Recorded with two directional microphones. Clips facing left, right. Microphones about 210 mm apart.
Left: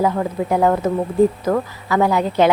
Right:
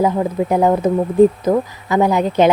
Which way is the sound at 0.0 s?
20° right (ahead or behind).